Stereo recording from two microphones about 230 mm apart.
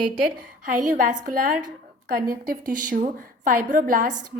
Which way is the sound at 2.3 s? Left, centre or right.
Right.